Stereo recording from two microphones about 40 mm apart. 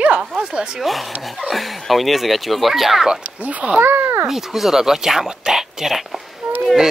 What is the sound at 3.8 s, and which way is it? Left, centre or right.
Speech, right.